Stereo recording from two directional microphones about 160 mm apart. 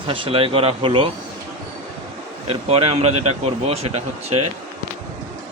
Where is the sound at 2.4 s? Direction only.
40° right (ahead or behind).